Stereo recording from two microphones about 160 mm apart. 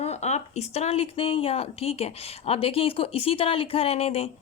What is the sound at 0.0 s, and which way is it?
Speech, 45° left (ahead or behind).